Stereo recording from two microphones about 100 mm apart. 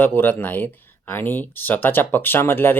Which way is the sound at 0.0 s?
20° left (ahead or behind).